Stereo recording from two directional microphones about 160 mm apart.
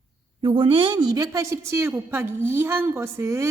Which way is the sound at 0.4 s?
30° right (ahead or behind).